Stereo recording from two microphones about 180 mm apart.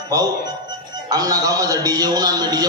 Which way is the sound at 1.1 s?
20° right (ahead or behind).